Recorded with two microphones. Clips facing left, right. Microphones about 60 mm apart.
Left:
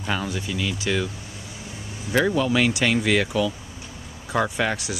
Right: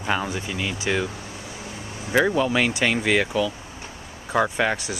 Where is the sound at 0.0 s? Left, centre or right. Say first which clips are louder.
Right 2 dB; centre.